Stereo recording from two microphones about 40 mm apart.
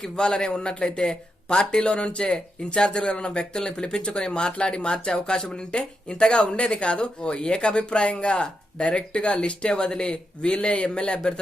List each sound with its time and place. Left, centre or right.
0.2 s speech: centre